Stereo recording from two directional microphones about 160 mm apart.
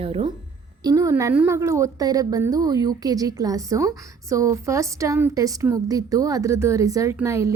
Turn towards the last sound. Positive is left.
turn(degrees=-20)  # may be behind; listen again after turning